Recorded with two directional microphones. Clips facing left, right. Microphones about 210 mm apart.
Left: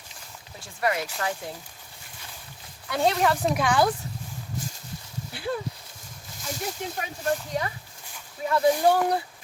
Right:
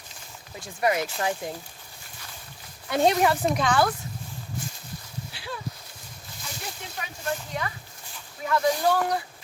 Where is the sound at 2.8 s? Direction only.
20° right (ahead or behind).